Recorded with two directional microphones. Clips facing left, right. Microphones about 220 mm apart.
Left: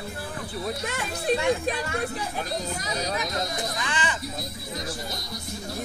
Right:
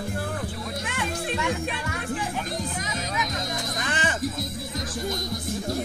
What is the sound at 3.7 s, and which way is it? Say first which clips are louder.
Music: right 2 dB; 45° right (ahead or behind).